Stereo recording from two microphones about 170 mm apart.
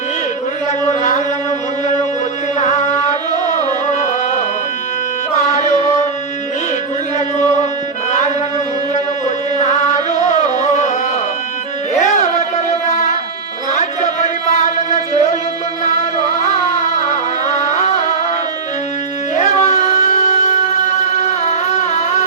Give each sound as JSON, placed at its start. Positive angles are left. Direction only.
{"t": 0.9, "sound": "a sound", "side_deg": 45}
{"t": 2.6, "sound": "carnatic music", "side_deg": 45}
{"t": 3.3, "sound": "music", "side_deg": -25}
{"t": 3.6, "sound": "music", "side_deg": 45}
{"t": 5.5, "sound": "chant", "side_deg": 45}
{"t": 8.1, "sound": "music", "side_deg": 45}
{"t": 11.9, "sound": "music", "side_deg": 45}
{"t": 16.4, "sound": "music", "side_deg": 45}
{"t": 19.4, "sound": "music", "side_deg": 45}